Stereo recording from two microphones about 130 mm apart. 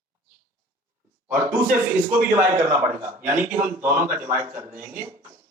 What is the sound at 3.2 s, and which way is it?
Speech, 15° right (ahead or behind).